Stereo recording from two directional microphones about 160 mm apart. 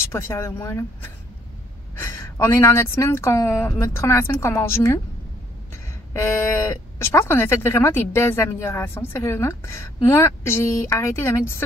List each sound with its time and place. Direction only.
0.0 s speech: 15° left (ahead or behind)
6.1 s speech: 15° left (ahead or behind)